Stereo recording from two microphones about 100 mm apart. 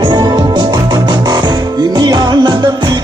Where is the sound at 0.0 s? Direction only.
45° right (ahead or behind).